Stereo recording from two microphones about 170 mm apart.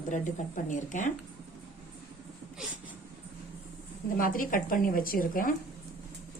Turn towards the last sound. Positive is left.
turn(degrees=55)  # may be behind; listen again after turning